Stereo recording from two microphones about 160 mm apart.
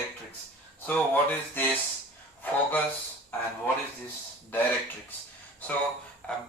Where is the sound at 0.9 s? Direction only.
10° left (ahead or behind).